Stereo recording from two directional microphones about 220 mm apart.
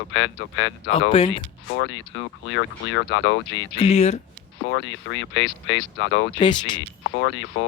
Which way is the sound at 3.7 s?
25° left (ahead or behind).